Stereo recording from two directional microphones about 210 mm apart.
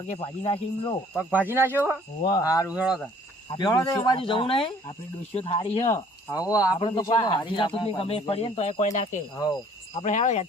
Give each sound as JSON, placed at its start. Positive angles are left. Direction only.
{"t": 0.1, "sound": "speech", "side_deg": 25}
{"t": 1.3, "sound": "speech", "side_deg": -10}
{"t": 2.2, "sound": "speech", "side_deg": 20}
{"t": 2.7, "sound": "speech", "side_deg": -5}
{"t": 3.6, "sound": "speech", "side_deg": 20}
{"t": 6.3, "sound": "speech", "side_deg": 15}